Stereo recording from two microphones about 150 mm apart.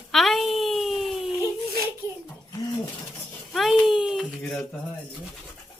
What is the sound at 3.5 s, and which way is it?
Speech, centre (ahead or behind).